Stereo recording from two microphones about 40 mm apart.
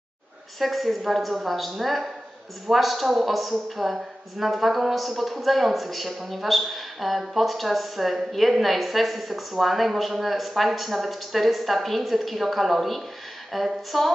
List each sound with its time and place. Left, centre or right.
0.6 s a woman's voice: centre